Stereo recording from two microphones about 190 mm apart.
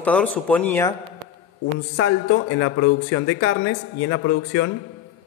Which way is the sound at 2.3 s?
80° left.